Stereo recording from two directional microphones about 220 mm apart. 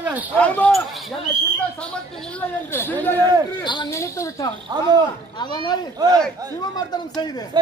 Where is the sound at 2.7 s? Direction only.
10° left (ahead or behind).